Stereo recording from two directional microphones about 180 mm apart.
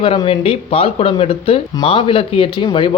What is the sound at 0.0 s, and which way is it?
Speech, 30° left (ahead or behind).